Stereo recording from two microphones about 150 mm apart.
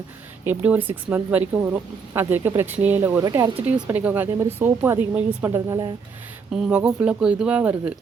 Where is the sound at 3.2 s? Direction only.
25° right (ahead or behind).